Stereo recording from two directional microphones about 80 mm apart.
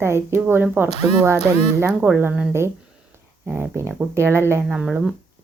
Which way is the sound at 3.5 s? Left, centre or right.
Right.